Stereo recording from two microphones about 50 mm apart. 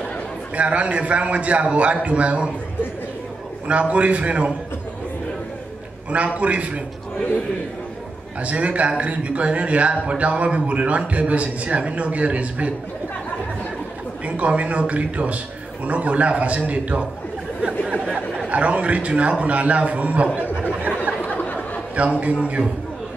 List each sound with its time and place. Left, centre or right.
0.6 s a man's voice: right
3.6 s a man's voice: right
6.0 s a man's voice: right
8.4 s a man's voice: right
14.2 s a man's voice: right
17.6 s chatter: right
18.5 s a man's voice: right
21.2 s a sound: left
22.2 s a man's voice: right